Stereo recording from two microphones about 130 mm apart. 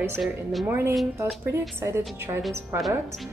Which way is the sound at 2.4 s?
Centre (ahead or behind).